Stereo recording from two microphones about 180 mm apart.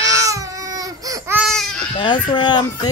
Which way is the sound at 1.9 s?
25° left (ahead or behind).